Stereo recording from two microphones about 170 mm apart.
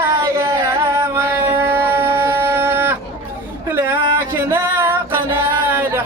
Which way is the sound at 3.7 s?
15° right (ahead or behind).